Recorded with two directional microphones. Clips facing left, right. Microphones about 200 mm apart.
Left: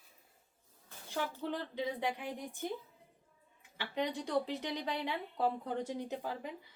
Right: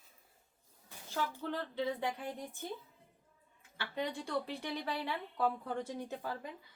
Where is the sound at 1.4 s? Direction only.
15° left (ahead or behind).